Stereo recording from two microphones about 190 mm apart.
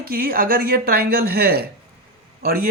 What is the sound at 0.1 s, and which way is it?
Speech, 50° right (ahead or behind).